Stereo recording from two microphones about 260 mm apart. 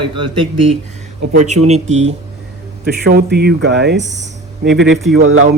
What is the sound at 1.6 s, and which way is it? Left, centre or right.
Speech, right.